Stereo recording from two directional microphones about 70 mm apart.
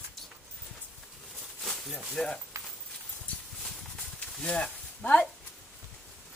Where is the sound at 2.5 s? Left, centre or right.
Right.